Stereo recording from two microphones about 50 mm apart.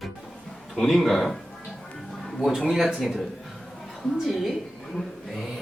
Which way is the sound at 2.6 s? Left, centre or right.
Centre.